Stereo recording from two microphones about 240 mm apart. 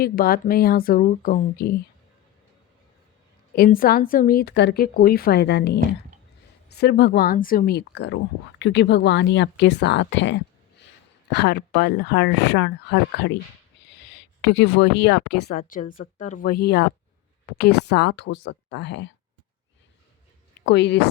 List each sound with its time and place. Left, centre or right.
0.0 s a woman's voice: left
3.5 s a woman's voice: left
20.7 s speech: left